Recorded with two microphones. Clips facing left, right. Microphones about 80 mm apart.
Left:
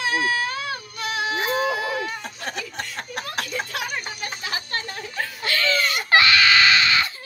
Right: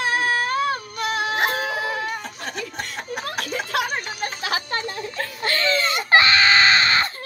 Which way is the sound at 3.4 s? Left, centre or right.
Right.